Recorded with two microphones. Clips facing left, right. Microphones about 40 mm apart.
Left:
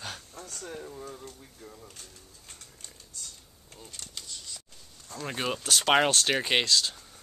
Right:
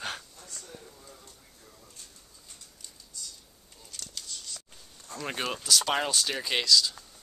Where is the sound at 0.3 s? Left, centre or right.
Left.